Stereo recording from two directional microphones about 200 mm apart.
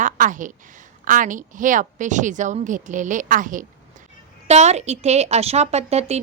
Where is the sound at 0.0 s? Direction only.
40° right (ahead or behind).